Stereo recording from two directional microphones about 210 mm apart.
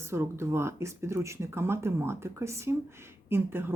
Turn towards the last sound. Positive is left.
turn(degrees=-10)  # may be behind; listen again after turning